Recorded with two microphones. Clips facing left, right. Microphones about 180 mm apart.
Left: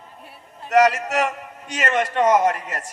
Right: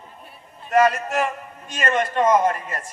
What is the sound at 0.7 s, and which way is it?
A man's voice, 75° left (ahead or behind).